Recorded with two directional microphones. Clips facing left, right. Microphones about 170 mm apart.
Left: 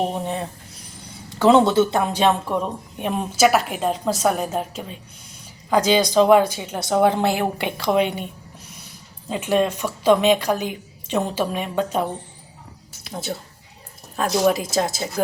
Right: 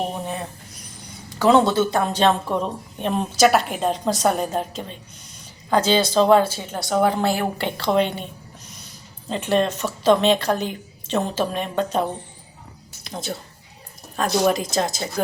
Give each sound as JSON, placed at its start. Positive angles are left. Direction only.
{"t": 0.1, "sound": "a woman's voice", "side_deg": 25}
{"t": 9.3, "sound": "a woman's voice", "side_deg": 10}
{"t": 13.1, "sound": "a woman's voice", "side_deg": 5}